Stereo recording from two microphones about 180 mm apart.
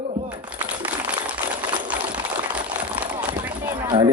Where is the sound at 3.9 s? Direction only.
25° right (ahead or behind).